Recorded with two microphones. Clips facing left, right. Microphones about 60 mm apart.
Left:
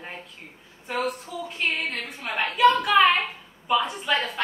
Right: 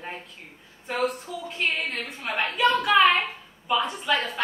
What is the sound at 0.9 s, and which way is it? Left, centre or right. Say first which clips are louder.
A woman's voice: right 1 dB; centre.